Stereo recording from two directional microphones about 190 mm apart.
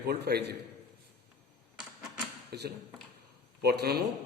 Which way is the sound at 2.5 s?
55° right (ahead or behind).